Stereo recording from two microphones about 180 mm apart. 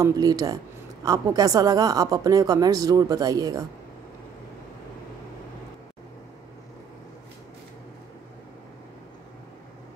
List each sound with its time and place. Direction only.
0.0 s a woman's voice: 20° right (ahead or behind)